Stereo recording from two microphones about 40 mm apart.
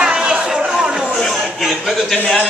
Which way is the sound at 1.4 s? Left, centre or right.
Centre.